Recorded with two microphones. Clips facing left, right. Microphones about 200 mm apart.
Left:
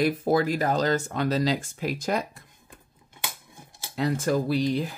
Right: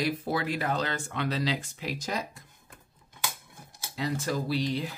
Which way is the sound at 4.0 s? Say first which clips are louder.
Left 6 dB; 55° left (ahead or behind).